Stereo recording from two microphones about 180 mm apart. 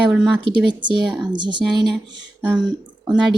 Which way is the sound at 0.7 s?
25° right (ahead or behind).